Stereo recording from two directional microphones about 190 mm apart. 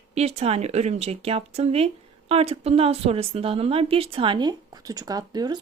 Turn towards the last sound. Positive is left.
turn(degrees=-20)  # may be behind; listen again after turning